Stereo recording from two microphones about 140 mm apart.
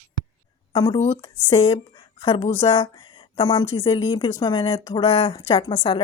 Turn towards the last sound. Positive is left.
turn(degrees=35)  # may be behind; listen again after turning